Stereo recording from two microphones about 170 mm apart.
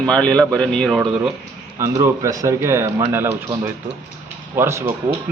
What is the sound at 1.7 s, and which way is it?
Speech, 20° right (ahead or behind).